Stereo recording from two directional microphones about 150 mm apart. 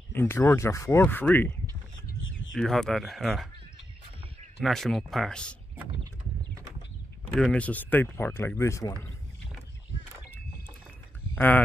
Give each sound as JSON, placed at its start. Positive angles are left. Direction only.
{"t": 0.1, "sound": "speech", "side_deg": 15}
{"t": 2.5, "sound": "speech", "side_deg": 5}
{"t": 4.6, "sound": "speech", "side_deg": 0}
{"t": 7.3, "sound": "speech", "side_deg": 5}
{"t": 11.3, "sound": "speech", "side_deg": 10}